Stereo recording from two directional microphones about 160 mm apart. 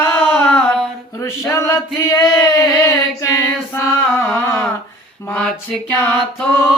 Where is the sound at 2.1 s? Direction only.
20° left (ahead or behind).